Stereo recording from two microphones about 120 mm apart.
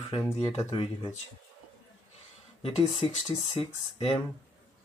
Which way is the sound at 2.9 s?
60° left (ahead or behind).